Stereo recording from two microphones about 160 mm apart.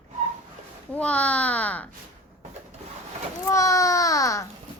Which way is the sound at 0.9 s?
10° left (ahead or behind).